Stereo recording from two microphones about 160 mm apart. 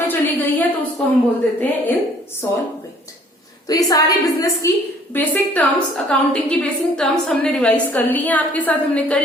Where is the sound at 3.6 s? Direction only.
20° left (ahead or behind).